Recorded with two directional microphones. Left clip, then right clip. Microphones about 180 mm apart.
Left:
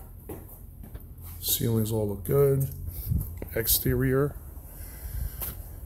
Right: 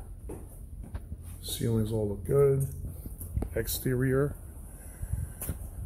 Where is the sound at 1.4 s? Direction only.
15° left (ahead or behind).